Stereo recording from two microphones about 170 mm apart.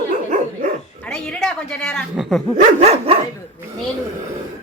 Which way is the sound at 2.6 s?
40° right (ahead or behind).